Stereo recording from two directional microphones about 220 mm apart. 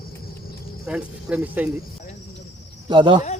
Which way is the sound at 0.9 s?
5° right (ahead or behind).